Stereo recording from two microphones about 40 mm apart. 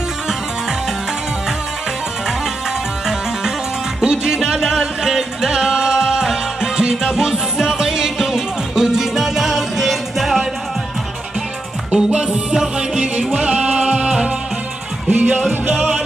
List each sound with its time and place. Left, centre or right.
4.0 s music: centre
11.9 s music: right
15.0 s music: right